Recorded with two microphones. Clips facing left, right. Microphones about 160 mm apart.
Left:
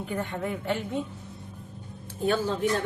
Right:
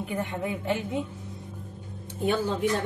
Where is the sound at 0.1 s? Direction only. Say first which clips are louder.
Left 1 dB; 15° right (ahead or behind).